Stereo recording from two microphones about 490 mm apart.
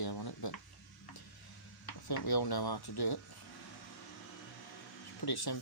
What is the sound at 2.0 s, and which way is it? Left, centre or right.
Speech, left.